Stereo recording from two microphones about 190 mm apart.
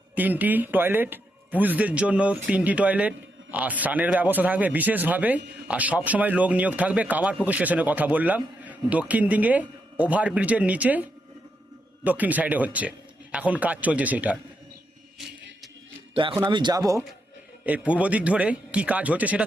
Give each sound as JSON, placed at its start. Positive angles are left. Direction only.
{"t": 0.2, "sound": "a man's voice", "side_deg": -10}
{"t": 16.1, "sound": "speech", "side_deg": -25}
{"t": 17.7, "sound": "a man's voice", "side_deg": -5}